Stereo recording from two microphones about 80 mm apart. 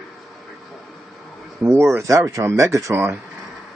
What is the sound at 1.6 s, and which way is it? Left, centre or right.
Speech, right.